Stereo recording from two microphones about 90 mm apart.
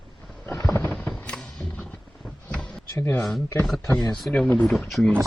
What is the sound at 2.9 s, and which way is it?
Speech, 20° left (ahead or behind).